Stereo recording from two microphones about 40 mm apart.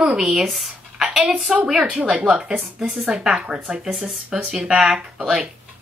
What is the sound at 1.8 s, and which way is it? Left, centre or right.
Speech, right.